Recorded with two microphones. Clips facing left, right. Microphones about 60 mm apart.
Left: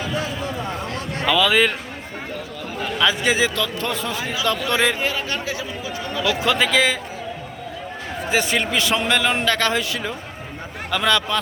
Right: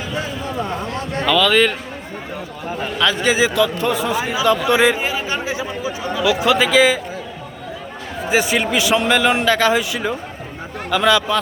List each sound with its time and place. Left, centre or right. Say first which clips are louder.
1.2 s a man's voice: right 2 dB; centre
3.0 s speech: right 2 dB; centre
3.3 s a man's voice: right 5 dB; centre
4.4 s chatter: right 6 dB; centre
6.1 s a man's voice: right 4 dB; centre
8.3 s a man's voice: right 4 dB; centre
10.9 s speech: right 4 dB; centre